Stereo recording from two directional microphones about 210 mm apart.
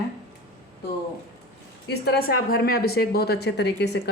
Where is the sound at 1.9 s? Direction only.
50° left (ahead or behind).